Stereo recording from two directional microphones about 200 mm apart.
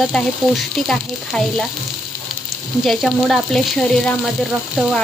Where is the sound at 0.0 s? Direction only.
Centre (ahead or behind).